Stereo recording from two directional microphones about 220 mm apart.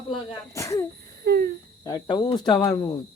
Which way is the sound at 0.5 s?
15° left (ahead or behind).